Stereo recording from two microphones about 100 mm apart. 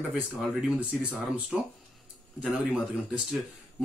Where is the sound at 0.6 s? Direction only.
15° right (ahead or behind).